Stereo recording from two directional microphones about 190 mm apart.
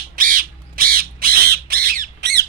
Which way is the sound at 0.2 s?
45° right (ahead or behind).